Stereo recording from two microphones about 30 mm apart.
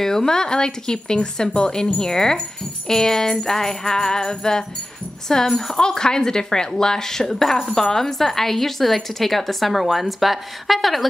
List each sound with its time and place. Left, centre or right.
0.0 s speech: centre
5.8 s speech: left; by 11.1 s centre